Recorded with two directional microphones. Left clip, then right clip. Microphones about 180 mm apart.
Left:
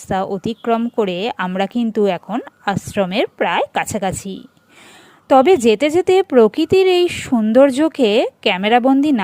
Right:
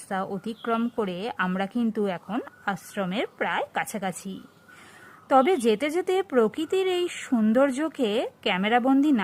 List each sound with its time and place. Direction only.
0.1 s a woman's voice: 30° left (ahead or behind)